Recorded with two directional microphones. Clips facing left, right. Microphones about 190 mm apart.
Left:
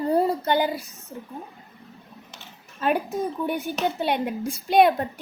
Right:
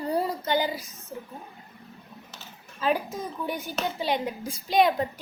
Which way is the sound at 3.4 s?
60° left (ahead or behind).